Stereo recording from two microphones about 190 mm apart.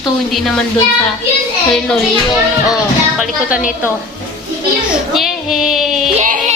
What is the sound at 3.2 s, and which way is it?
Child singing, 5° right (ahead or behind).